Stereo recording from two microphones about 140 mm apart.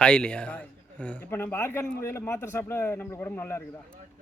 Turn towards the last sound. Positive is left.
turn(degrees=15)  # may be behind; listen again after turning